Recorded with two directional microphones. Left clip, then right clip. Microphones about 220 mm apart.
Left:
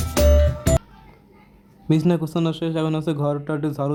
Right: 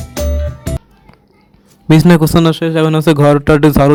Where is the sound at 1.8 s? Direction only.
40° right (ahead or behind).